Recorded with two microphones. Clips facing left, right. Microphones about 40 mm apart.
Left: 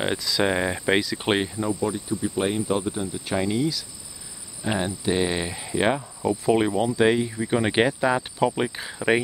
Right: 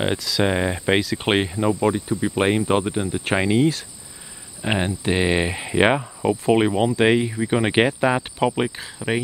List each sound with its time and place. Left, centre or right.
0.4 s speech: centre
1.6 s speech: right
4.6 s speech: right
7.3 s speech: centre
8.7 s speech: centre